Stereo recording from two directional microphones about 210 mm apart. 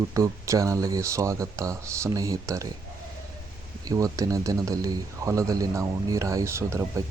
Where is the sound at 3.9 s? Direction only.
15° right (ahead or behind).